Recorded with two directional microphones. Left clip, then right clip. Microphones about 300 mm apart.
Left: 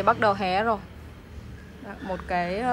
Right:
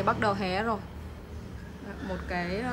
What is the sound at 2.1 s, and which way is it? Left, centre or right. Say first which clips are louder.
Speech: left 6 dB; centre.